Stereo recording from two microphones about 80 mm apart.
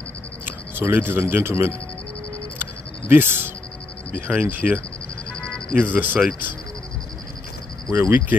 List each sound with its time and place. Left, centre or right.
0.5 s a sound: right
1.2 s speech: right
2.6 s insect: right
4.1 s speech: centre
5.3 s music: centre
5.8 s speech: right
7.9 s speech: right